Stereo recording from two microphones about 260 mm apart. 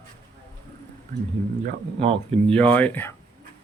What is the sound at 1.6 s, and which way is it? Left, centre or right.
Speech, right.